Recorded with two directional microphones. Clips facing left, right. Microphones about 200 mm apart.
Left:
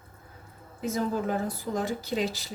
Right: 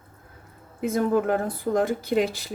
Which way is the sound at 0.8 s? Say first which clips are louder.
Right 6 dB; 55° right (ahead or behind).